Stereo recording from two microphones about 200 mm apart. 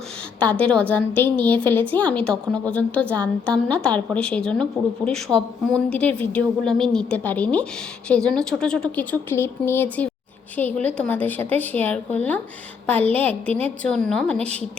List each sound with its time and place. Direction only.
0.3 s a woman's voice: 5° left (ahead or behind)